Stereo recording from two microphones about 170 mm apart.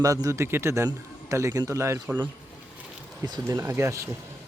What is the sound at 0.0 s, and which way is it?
A man's voice, 20° right (ahead or behind).